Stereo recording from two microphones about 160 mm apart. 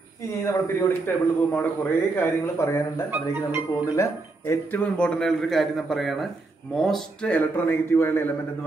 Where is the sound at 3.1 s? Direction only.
10° right (ahead or behind).